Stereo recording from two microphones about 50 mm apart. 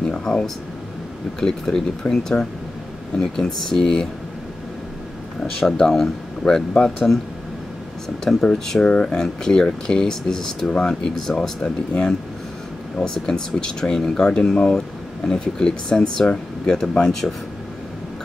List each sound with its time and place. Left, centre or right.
0.0 s a sound: centre
1.4 s speech: centre
5.6 s speech: centre
6.7 s speech: left
8.2 s speech: centre